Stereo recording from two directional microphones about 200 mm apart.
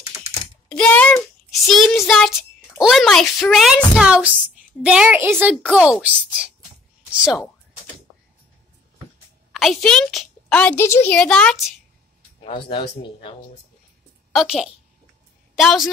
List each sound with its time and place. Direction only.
0.7 s child singing: 5° left (ahead or behind)
1.9 s a sound: centre (ahead or behind)
4.8 s a woman's voice: 5° right (ahead or behind)
9.5 s a woman's voice: centre (ahead or behind)
12.4 s speech: 25° left (ahead or behind)
14.3 s a woman's voice: centre (ahead or behind)